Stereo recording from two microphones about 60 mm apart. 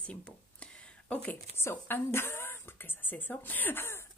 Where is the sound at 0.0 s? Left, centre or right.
Centre.